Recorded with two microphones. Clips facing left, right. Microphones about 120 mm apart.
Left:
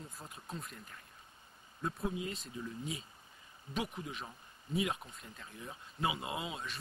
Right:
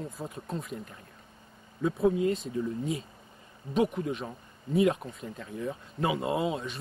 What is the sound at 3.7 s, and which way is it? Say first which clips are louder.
Speech: right 12 dB; 30° right (ahead or behind).